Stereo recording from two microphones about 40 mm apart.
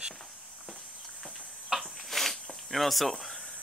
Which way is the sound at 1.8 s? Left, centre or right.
Centre.